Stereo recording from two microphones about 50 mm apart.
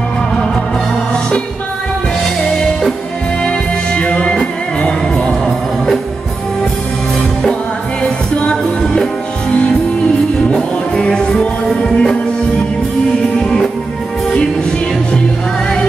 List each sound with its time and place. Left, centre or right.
3.4 s music: left
8.0 s music: centre
13.4 s music: centre